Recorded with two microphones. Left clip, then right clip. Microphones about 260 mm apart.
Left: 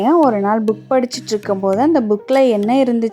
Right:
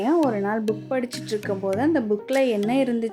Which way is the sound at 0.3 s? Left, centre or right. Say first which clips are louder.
Left 9 dB; left.